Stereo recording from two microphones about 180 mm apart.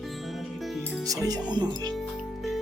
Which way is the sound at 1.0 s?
20° right (ahead or behind).